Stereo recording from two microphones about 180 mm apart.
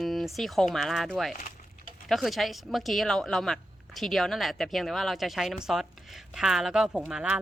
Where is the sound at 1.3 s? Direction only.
50° left (ahead or behind).